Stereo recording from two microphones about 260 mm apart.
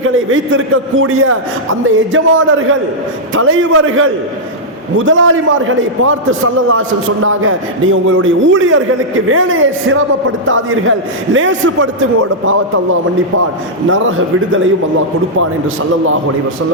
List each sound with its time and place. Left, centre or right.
0.0 s a man's voice: right